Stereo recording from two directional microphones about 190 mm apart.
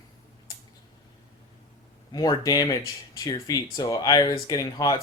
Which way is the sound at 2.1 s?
20° left (ahead or behind).